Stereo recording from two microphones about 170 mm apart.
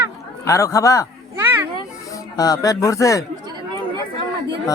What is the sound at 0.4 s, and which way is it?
Speech, 20° left (ahead or behind).